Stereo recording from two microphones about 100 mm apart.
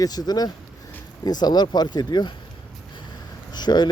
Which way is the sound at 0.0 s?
40° left (ahead or behind).